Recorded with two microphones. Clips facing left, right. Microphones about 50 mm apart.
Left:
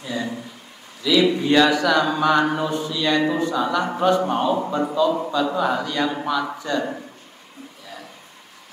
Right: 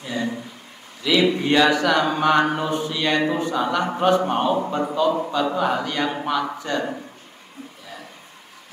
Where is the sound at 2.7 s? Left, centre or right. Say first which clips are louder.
Even; right.